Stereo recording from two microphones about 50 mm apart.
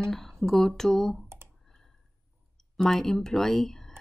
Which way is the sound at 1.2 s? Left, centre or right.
Right.